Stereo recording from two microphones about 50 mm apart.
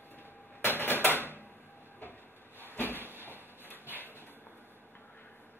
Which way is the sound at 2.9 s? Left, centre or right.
Right.